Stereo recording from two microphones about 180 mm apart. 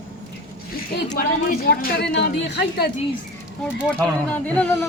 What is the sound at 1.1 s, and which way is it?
A woman's voice, 55° left (ahead or behind).